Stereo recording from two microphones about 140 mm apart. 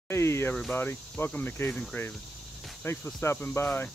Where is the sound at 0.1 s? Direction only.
20° left (ahead or behind).